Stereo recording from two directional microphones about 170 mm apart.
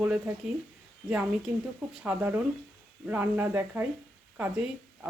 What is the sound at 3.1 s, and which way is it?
Speech, 10° right (ahead or behind).